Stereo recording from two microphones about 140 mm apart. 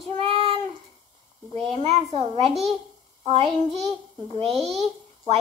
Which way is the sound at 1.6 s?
50° right (ahead or behind).